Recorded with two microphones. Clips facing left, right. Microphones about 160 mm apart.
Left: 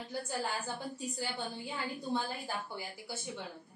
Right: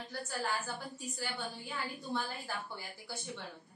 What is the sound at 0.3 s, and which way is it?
Speech, 20° left (ahead or behind).